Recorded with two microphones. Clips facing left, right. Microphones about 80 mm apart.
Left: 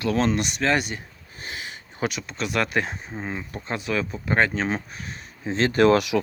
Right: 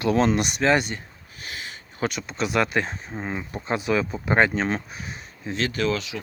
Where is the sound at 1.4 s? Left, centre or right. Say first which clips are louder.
Left 1 dB; left.